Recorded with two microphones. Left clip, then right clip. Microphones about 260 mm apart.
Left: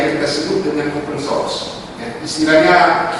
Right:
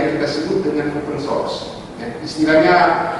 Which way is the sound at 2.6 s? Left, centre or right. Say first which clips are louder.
Left 2 dB; centre.